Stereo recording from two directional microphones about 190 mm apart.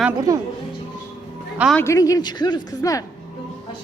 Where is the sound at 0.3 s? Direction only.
15° right (ahead or behind).